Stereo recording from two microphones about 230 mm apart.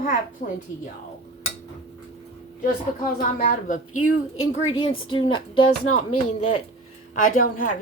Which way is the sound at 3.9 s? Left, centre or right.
Left.